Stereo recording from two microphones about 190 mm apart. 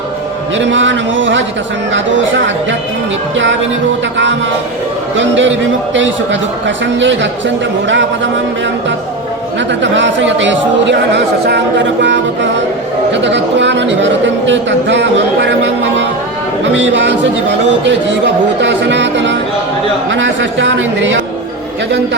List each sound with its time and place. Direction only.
0.5 s a man's voice: 75° right (ahead or behind)
5.1 s a man's voice: 75° right (ahead or behind)
9.6 s a man's voice: 70° right (ahead or behind)